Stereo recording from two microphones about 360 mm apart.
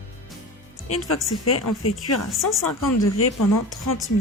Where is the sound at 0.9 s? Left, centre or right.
Left.